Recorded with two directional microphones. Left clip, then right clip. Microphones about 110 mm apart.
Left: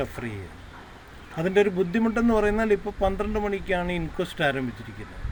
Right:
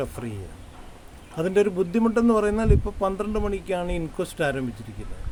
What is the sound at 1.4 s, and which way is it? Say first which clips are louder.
Speech: even; 30° right (ahead or behind).